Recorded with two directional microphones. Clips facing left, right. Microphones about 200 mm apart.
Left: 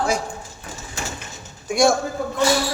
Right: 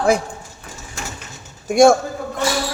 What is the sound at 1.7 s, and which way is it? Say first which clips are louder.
Speech: right 6 dB; 50° right (ahead or behind).